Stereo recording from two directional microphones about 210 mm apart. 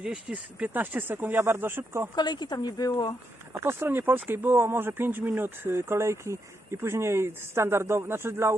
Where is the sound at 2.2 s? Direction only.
20° left (ahead or behind).